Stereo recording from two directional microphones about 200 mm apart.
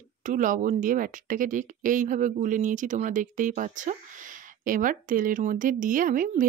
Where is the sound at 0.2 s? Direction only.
40° right (ahead or behind).